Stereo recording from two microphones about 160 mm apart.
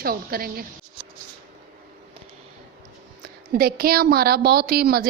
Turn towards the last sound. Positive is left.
turn(degrees=-70)  # may be behind; listen again after turning